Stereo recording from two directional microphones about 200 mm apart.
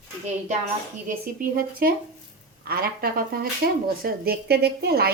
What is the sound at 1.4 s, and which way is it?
Speech, 50° right (ahead or behind).